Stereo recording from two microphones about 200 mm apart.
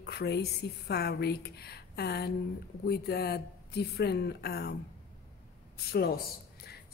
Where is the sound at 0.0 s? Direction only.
55° left (ahead or behind).